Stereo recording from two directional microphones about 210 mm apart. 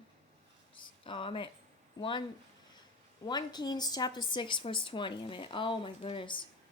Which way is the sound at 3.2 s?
20° left (ahead or behind).